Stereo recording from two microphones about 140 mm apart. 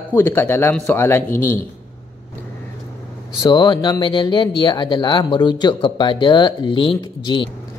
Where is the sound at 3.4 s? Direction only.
30° left (ahead or behind).